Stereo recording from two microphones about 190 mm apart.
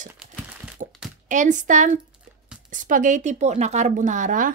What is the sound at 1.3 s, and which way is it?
Speech, 40° right (ahead or behind).